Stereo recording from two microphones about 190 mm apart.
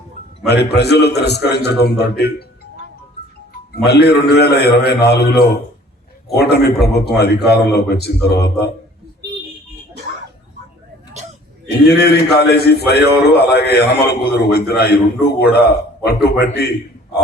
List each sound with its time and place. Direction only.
0.4 s a man's voice: 60° left (ahead or behind)
3.8 s a man's voice: 60° left (ahead or behind)
11.9 s a man's voice: 60° left (ahead or behind)